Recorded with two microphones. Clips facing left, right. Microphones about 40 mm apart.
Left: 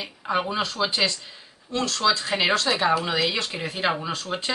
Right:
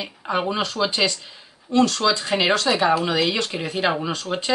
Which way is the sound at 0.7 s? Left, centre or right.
Centre.